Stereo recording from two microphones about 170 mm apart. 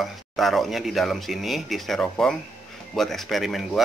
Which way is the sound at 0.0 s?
Centre (ahead or behind).